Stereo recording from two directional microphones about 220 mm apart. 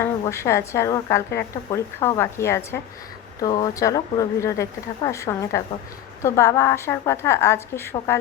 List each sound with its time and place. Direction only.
0.0 s a woman's voice: 15° left (ahead or behind)